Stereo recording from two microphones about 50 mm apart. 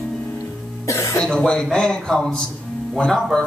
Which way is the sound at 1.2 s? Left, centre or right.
Centre.